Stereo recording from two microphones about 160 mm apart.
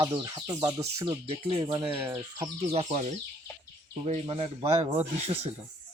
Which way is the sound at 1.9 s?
15° right (ahead or behind).